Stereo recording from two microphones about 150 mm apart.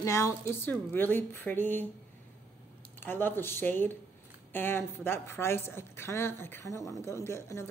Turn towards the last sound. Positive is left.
turn(degrees=20)  # may be behind; listen again after turning